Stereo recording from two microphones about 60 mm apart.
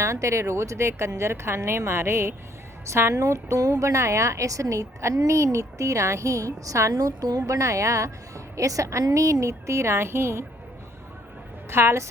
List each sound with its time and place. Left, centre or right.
0.0 s a woman's voice: right
11.7 s a woman's voice: right